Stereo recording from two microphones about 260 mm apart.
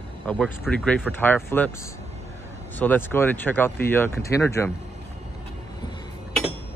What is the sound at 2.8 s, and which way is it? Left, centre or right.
Speech, centre.